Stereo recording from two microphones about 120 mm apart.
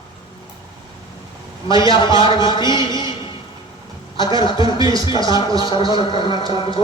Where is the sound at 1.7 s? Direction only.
40° left (ahead or behind).